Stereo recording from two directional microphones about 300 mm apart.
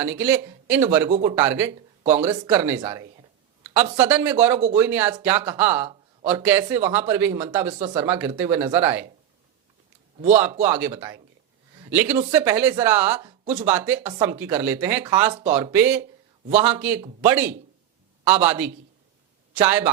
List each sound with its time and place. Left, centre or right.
0.0 s speech: centre
1.5 s speech: centre
2.0 s speech: right
3.9 s speech: centre
10.2 s speech: right
10.8 s speech: centre
13.1 s speech: right
13.7 s speech: centre